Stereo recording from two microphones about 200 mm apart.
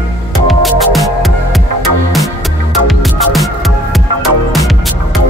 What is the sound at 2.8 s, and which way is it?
Music, centre (ahead or behind).